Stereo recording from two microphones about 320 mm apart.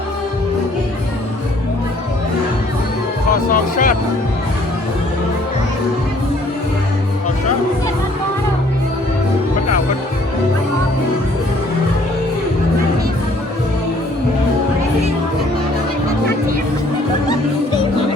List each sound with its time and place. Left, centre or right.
3.5 s speech: left